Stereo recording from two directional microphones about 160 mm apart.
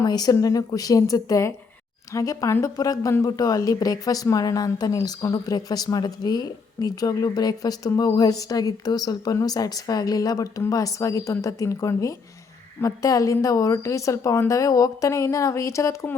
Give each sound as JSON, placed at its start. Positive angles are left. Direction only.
{"t": 0.0, "sound": "a woman's voice", "side_deg": 25}